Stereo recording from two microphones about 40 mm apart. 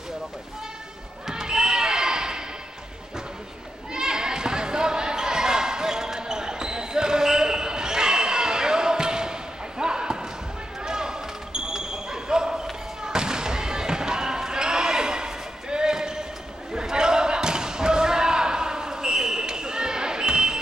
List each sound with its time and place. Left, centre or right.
1.2 s basketball bounce: centre
3.9 s basketball bounce: centre